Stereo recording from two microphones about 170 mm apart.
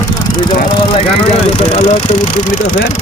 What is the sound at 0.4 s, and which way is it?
Speech, 30° left (ahead or behind).